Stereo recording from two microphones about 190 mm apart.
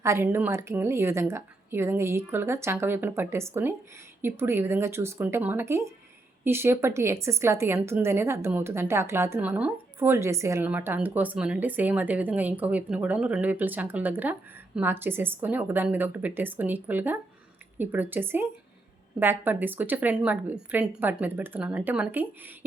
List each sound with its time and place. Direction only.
0.0 s a woman's voice: 15° right (ahead or behind)